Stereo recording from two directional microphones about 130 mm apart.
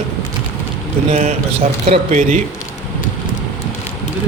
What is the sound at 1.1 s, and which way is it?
Speech, 70° right (ahead or behind).